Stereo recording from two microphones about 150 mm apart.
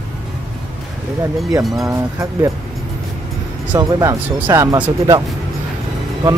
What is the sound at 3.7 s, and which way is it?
Speech, 25° right (ahead or behind).